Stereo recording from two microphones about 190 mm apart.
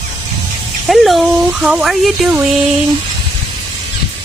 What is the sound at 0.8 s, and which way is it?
Speech, centre (ahead or behind).